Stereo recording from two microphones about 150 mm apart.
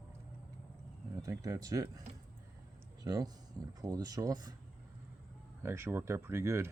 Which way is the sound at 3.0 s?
25° right (ahead or behind).